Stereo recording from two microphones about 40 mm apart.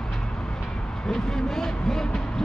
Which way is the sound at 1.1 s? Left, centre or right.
Centre.